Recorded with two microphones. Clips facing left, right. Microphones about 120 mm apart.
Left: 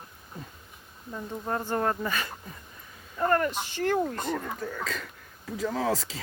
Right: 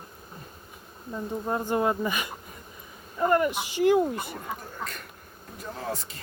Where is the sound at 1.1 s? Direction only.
15° right (ahead or behind).